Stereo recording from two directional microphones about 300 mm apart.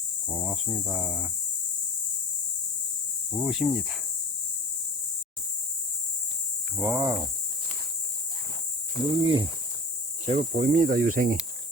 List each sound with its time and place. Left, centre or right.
0.3 s speech: centre
3.3 s speech: centre
6.7 s speech: centre
9.2 s speech: centre